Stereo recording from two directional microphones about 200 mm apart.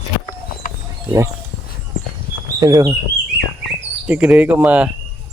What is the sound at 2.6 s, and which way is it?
Speech, 15° right (ahead or behind).